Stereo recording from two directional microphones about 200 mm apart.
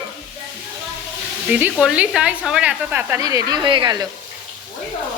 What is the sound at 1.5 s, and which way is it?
Speech, 10° right (ahead or behind).